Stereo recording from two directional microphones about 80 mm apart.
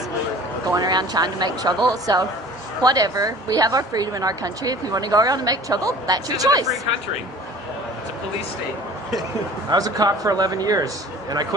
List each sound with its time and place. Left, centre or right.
0.7 s a woman's voice: right
9.7 s a woman's voice: right